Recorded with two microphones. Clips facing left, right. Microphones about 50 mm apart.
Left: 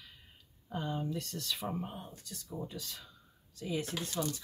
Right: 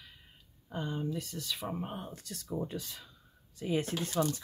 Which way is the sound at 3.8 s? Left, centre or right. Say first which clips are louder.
Right 5 dB; right.